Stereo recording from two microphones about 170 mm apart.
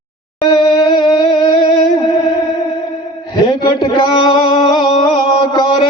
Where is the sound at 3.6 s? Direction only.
25° left (ahead or behind).